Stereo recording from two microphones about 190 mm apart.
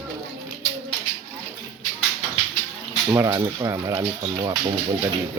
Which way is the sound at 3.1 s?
20° right (ahead or behind).